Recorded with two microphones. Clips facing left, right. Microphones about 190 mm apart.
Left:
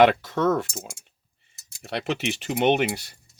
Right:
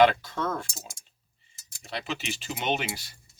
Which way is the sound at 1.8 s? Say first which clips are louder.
Left 7 dB; 65° left (ahead or behind).